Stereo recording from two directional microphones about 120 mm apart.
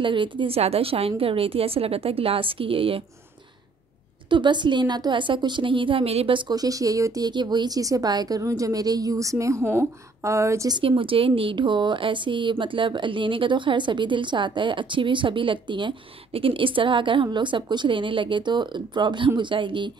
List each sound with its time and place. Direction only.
0.0 s speech: 45° right (ahead or behind)
4.3 s speech: 40° right (ahead or behind)
6.5 s speech: 30° right (ahead or behind)
10.7 s speech: 45° right (ahead or behind)